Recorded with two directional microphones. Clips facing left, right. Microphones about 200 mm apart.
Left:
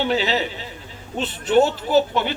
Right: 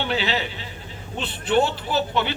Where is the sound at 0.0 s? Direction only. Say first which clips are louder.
Left 4 dB; 40° left (ahead or behind).